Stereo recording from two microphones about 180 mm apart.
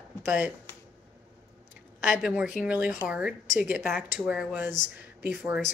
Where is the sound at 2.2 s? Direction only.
5° right (ahead or behind).